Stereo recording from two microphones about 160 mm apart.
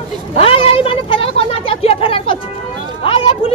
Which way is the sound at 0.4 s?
35° left (ahead or behind).